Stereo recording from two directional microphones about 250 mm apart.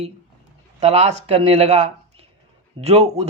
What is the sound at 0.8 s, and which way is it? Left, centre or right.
Speech, right.